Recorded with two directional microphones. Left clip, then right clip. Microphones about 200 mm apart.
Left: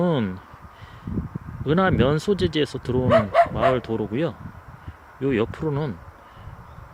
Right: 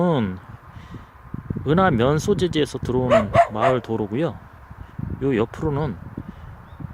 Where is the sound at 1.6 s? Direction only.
5° right (ahead or behind).